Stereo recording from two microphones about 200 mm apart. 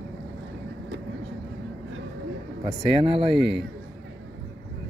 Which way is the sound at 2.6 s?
25° right (ahead or behind).